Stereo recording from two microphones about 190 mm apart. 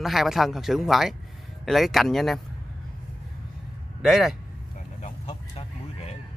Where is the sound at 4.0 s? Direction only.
Centre (ahead or behind).